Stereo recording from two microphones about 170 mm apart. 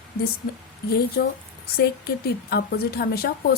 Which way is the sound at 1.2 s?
75° left (ahead or behind).